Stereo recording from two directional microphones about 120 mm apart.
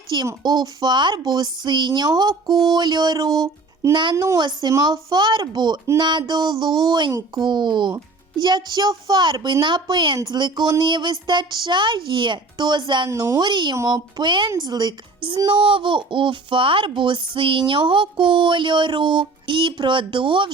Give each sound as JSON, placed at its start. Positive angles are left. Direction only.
{"t": 0.1, "sound": "speech", "side_deg": -40}
{"t": 13.1, "sound": "speech", "side_deg": -25}